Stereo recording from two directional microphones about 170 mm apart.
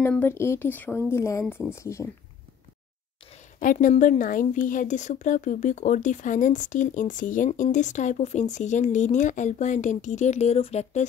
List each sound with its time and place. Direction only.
0.0 s speech: 10° left (ahead or behind)
3.5 s a woman's voice: 50° left (ahead or behind)